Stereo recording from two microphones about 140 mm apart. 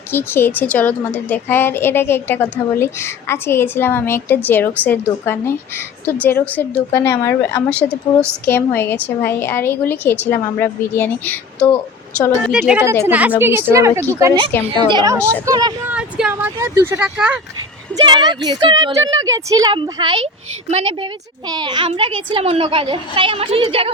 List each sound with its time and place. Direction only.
0.1 s a woman's voice: 15° left (ahead or behind)
7.7 s a woman's voice: 10° left (ahead or behind)
12.5 s a woman's voice: 10° right (ahead or behind)
14.8 s a woman's voice: 30° right (ahead or behind)
15.1 s a woman's voice: 20° right (ahead or behind)
15.9 s speech: 5° right (ahead or behind)
17.9 s a woman's voice: 30° right (ahead or behind); by 20.9 s 50° right (ahead or behind)
21.0 s a woman's voice: 30° right (ahead or behind)